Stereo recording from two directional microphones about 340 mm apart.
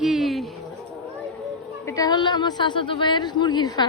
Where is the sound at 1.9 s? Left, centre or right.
Centre.